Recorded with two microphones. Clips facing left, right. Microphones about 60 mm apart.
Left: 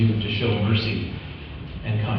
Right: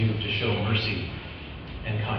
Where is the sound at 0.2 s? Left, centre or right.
Right.